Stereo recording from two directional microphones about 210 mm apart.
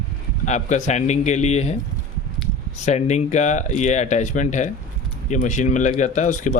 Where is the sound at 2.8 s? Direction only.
35° left (ahead or behind).